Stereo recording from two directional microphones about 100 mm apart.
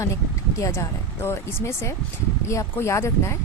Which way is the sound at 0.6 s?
25° left (ahead or behind).